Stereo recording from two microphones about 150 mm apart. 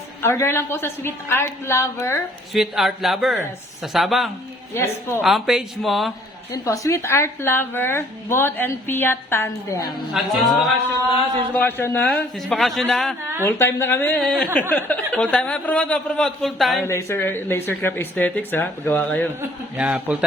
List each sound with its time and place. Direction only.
0.2 s a woman's voice: 15° left (ahead or behind)
2.5 s speech: centre (ahead or behind)
4.7 s a woman's voice: 15° left (ahead or behind)
5.2 s speech: centre (ahead or behind)
6.5 s a woman's voice: 20° left (ahead or behind)
10.4 s speech: centre (ahead or behind)
11.5 s a woman's voice: 15° left (ahead or behind)
13.4 s a woman's voice: 15° left (ahead or behind); by 16.8 s centre (ahead or behind)
16.8 s a woman's voice: 20° left (ahead or behind)
19.4 s a man's voice: 10° right (ahead or behind)